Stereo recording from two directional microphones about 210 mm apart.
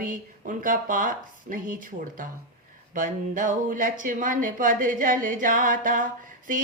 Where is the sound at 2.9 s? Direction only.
40° right (ahead or behind).